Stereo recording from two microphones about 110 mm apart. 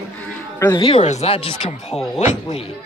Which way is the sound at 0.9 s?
90° left.